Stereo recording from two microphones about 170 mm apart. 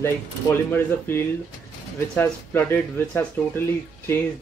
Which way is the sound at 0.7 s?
15° left (ahead or behind).